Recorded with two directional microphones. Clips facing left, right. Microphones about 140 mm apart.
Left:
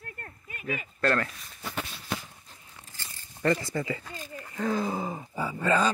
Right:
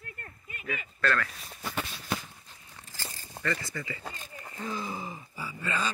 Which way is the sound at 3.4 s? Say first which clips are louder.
Left 7 dB; 90° right.